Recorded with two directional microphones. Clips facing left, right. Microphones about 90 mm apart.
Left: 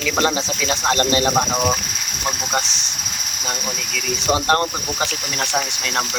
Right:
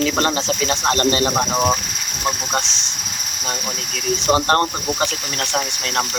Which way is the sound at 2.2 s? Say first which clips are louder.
Right 1 dB; 10° left (ahead or behind).